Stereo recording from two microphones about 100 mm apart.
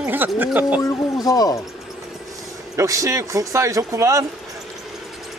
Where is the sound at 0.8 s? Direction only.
40° left (ahead or behind).